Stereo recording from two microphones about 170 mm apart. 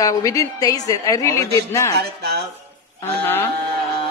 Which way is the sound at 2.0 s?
70° right (ahead or behind).